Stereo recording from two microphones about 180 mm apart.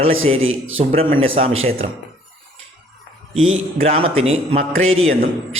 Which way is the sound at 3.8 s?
35° right (ahead or behind).